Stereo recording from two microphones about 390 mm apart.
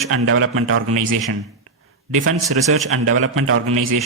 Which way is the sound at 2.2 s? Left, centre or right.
Right.